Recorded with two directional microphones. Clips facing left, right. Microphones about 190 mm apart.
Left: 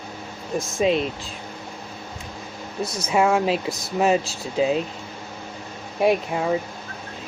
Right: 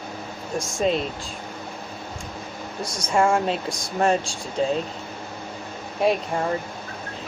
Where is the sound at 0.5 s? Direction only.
Centre (ahead or behind).